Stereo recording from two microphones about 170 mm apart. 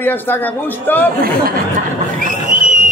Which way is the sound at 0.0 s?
10° left (ahead or behind).